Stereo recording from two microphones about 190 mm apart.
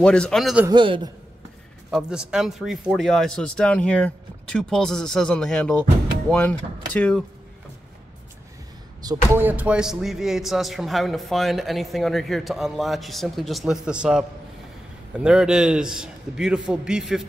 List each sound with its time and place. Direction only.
0.0 s speech: 5° left (ahead or behind)
0.7 s a man's voice: 25° right (ahead or behind)
1.9 s speech: 5° right (ahead or behind)
9.0 s speech: 15° right (ahead or behind)